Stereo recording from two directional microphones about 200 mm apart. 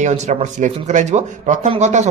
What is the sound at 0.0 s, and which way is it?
Speech, 35° right (ahead or behind).